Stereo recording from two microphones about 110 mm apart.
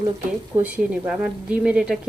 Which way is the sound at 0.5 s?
15° right (ahead or behind).